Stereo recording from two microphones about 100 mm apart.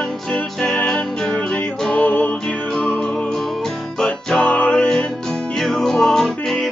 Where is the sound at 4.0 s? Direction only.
10° left (ahead or behind).